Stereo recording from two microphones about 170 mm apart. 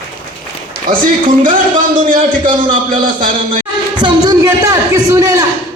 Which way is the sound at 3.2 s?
50° right (ahead or behind).